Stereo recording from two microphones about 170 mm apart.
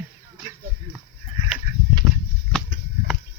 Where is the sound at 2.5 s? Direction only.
5° left (ahead or behind).